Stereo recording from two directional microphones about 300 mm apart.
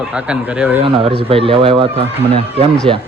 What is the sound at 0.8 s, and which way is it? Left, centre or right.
Speech, centre.